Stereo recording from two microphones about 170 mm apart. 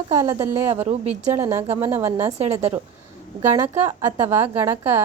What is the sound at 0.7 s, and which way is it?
Speech, 40° right (ahead or behind).